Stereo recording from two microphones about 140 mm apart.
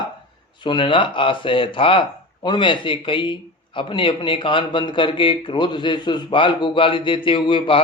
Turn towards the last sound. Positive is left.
turn(degrees=35)  # may be behind; listen again after turning